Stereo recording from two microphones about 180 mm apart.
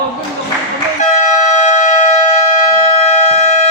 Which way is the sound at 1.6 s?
40° left (ahead or behind).